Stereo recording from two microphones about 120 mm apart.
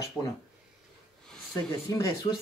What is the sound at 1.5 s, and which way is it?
Speech, 30° left (ahead or behind).